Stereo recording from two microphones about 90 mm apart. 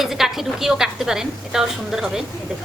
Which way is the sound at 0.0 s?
5° right (ahead or behind).